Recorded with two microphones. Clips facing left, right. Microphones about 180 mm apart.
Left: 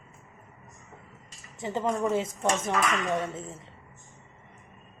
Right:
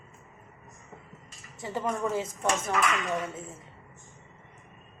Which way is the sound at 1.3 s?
20° left (ahead or behind).